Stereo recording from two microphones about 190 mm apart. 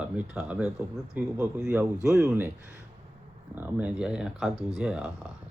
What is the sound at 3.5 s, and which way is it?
Speech, 10° right (ahead or behind).